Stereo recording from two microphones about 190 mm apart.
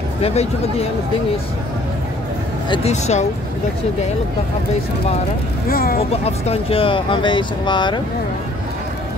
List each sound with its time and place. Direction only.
0.2 s speech: 35° left (ahead or behind)
2.7 s speech: 35° left (ahead or behind)
5.7 s speech: 50° left (ahead or behind)
6.2 s speech: 30° left (ahead or behind)